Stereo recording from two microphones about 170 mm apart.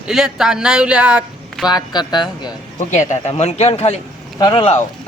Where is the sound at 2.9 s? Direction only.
45° left (ahead or behind).